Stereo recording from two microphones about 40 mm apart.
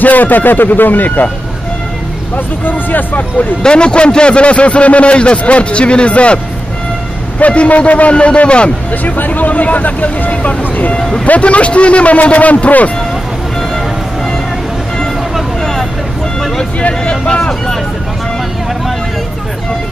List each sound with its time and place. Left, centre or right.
0.0 s speech: left
2.3 s speech: left
3.6 s a man's voice: left
9.0 s speech: left
11.0 s speech: centre
11.2 s speech: left
15.6 s vehicle: centre
16.8 s vehicle: left